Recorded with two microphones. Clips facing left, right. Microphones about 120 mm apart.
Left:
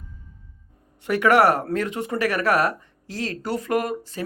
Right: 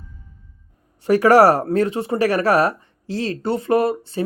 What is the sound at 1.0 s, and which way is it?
Speech, 35° right (ahead or behind).